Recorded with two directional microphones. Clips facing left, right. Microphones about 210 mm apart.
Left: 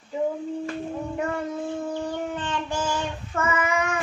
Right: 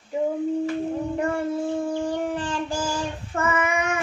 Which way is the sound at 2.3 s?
35° right (ahead or behind).